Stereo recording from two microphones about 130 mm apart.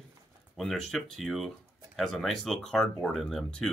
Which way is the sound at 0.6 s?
Centre (ahead or behind).